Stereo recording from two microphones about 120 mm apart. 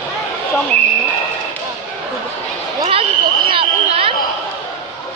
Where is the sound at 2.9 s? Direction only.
50° right (ahead or behind).